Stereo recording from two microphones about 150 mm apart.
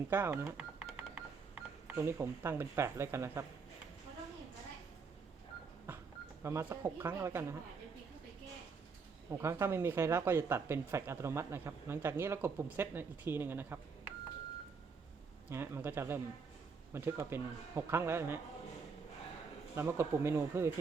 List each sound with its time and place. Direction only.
0.1 s speech: 15° right (ahead or behind)
6.4 s speech: 20° right (ahead or behind)
9.4 s speech: 20° right (ahead or behind)
15.4 s speech: 15° right (ahead or behind)
19.7 s speech: 15° right (ahead or behind)